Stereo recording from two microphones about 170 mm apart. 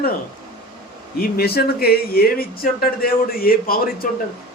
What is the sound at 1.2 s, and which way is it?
Speech, 65° left (ahead or behind).